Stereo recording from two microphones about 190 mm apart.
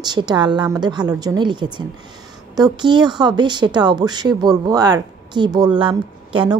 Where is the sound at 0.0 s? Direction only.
20° right (ahead or behind).